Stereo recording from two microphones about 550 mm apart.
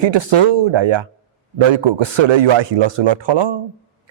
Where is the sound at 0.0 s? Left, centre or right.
Right.